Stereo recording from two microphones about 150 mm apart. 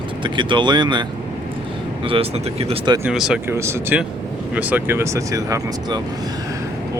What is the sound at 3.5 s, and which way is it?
Speech, 15° right (ahead or behind).